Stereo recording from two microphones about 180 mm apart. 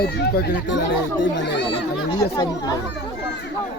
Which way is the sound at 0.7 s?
90° left.